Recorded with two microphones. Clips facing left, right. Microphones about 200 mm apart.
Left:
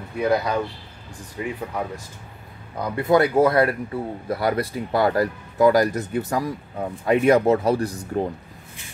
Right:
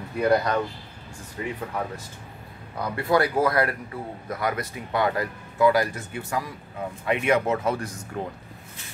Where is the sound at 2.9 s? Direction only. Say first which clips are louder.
Left 5 dB; 20° left (ahead or behind).